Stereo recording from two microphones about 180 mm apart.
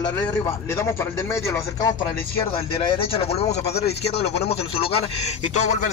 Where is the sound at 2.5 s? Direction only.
30° left (ahead or behind).